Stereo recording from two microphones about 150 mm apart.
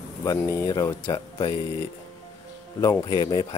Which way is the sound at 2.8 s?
30° left (ahead or behind).